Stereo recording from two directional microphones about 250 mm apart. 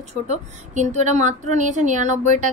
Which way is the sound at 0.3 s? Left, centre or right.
Right.